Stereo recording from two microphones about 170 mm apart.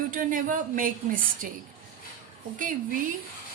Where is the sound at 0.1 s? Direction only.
50° right (ahead or behind).